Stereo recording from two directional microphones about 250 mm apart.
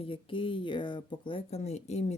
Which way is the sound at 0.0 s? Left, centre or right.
Centre.